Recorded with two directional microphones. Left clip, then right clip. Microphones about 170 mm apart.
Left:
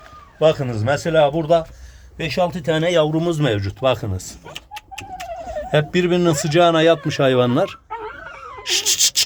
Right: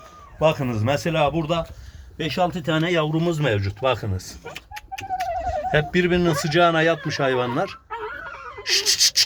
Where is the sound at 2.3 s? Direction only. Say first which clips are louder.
Left 3 dB; 35° left (ahead or behind).